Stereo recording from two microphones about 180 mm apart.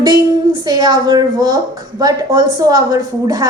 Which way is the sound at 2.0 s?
20° right (ahead or behind).